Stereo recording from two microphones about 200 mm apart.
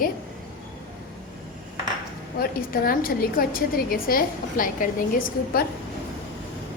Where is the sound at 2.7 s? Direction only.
45° left (ahead or behind).